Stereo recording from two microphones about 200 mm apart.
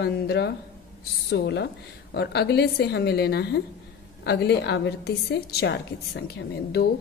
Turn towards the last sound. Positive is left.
turn(degrees=55)  # may be behind; listen again after turning